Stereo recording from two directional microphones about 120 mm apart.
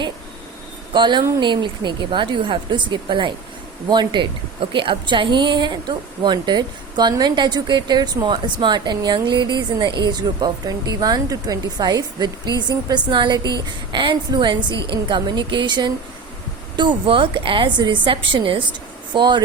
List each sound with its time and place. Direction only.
0.9 s a woman's voice: 40° right (ahead or behind)